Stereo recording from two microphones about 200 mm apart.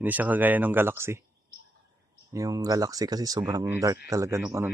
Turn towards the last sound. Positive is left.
turn(degrees=-15)  # may be behind; listen again after turning